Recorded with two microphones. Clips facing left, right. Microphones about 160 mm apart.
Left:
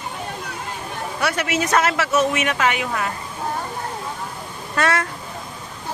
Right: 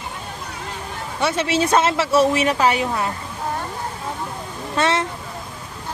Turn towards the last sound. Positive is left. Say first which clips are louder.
# right 1 dB
turn(degrees=-25)  # may be behind; listen again after turning